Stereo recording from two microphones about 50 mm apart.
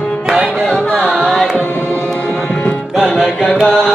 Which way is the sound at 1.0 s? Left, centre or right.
Centre.